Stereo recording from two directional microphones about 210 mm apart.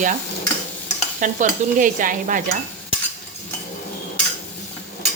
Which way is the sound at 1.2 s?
40° right (ahead or behind).